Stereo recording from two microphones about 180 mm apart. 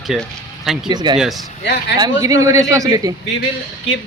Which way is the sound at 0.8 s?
25° right (ahead or behind).